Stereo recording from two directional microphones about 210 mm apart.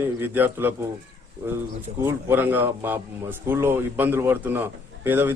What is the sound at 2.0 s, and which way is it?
A man's voice, 10° right (ahead or behind).